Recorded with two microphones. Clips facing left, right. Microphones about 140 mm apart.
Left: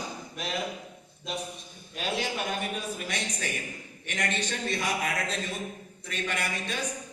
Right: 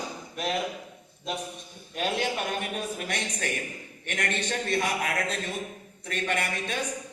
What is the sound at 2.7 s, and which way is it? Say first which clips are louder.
A woman's voice: right 2 dB; 55° right (ahead or behind).